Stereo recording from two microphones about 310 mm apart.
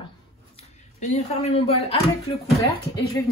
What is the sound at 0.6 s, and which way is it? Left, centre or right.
Speech, left.